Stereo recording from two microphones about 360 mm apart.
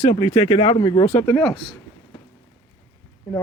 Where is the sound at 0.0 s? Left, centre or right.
Centre.